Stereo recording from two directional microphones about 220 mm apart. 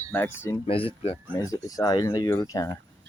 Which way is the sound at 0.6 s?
25° left (ahead or behind).